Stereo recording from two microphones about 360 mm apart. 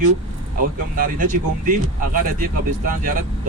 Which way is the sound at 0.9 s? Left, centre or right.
Right.